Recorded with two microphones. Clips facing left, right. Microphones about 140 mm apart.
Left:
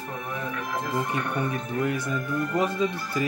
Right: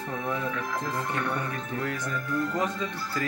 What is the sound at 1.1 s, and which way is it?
Speech, 15° left (ahead or behind).